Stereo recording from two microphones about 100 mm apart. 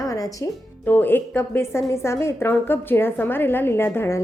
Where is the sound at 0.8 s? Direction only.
20° left (ahead or behind).